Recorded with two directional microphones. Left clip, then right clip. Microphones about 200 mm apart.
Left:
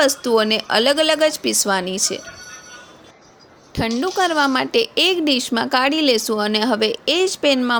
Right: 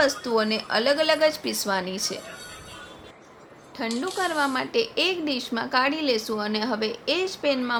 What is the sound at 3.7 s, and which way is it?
A woman's voice, 40° left (ahead or behind).